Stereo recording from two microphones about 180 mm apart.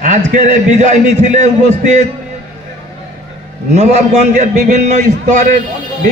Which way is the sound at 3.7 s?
40° right (ahead or behind).